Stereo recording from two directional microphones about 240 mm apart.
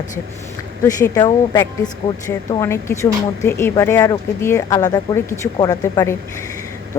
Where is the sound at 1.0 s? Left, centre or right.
Centre.